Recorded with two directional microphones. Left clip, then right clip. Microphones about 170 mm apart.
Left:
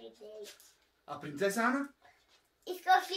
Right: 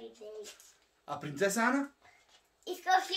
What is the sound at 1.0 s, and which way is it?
Speech, 35° right (ahead or behind).